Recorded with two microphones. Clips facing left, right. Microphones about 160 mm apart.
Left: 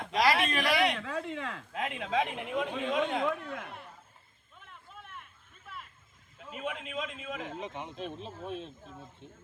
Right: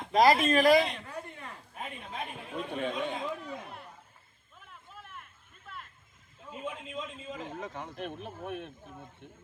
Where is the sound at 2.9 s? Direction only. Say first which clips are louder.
Left 6 dB; 75° left (ahead or behind).